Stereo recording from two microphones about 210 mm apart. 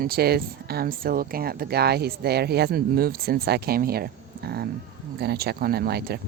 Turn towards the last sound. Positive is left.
turn(degrees=-50)  # may be behind; listen again after turning